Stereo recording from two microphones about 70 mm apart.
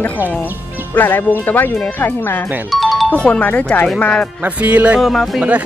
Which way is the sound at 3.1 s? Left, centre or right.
Centre.